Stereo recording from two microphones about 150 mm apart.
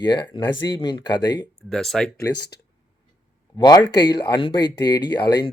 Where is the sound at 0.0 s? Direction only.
30° left (ahead or behind).